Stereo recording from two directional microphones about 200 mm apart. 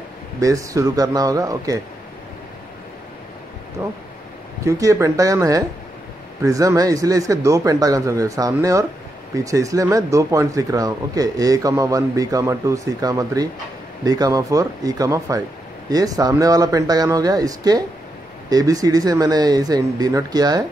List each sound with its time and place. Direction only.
0.4 s a man's voice: 15° right (ahead or behind)
3.8 s a man's voice: 10° right (ahead or behind)